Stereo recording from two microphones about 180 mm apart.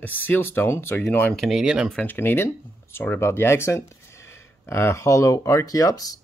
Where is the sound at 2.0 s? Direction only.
10° left (ahead or behind).